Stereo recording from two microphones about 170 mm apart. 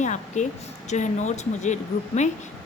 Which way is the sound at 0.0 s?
45° left (ahead or behind).